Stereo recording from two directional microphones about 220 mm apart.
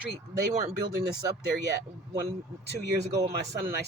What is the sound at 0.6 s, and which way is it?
Speech, 20° right (ahead or behind).